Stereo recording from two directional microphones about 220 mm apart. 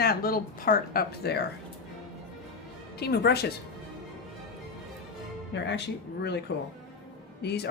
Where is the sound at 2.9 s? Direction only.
50° left (ahead or behind).